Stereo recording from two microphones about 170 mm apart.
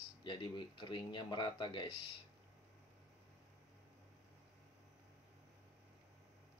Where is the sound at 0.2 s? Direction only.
25° left (ahead or behind).